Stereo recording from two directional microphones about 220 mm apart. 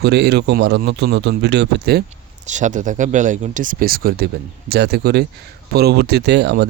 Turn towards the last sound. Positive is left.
turn(degrees=-50)  # may be behind; listen again after turning